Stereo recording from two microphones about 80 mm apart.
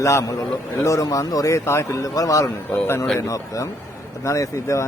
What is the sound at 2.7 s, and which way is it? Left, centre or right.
Speech, left.